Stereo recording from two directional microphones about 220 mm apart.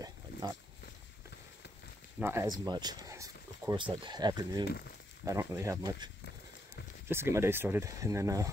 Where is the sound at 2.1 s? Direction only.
10° right (ahead or behind).